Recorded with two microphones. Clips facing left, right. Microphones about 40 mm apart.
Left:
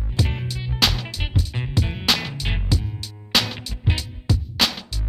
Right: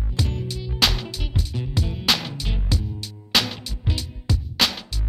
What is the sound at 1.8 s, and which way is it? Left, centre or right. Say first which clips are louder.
Music: left 1 dB; left.